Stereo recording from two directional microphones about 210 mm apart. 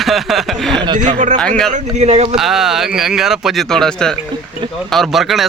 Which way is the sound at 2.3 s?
Centre (ahead or behind).